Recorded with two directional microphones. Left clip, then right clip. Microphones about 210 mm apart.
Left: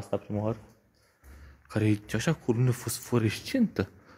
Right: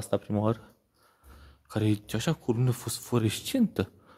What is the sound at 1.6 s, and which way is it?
Speech, 5° right (ahead or behind).